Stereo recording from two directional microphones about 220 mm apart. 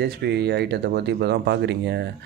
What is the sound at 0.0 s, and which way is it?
Speech, 50° right (ahead or behind).